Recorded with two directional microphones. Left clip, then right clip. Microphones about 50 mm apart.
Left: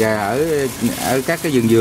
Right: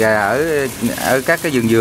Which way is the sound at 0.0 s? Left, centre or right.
Right.